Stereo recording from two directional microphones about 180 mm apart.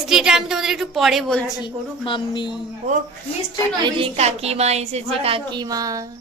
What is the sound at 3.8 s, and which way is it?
A woman's voice, 25° right (ahead or behind).